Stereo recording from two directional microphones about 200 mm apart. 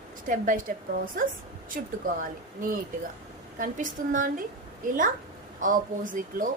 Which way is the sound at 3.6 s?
40° right (ahead or behind).